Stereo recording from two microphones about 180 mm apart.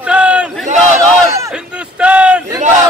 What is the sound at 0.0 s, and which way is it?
Battle cry, 5° right (ahead or behind).